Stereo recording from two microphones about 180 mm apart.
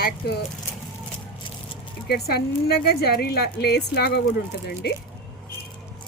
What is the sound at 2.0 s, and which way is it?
A woman's voice, 60° left (ahead or behind).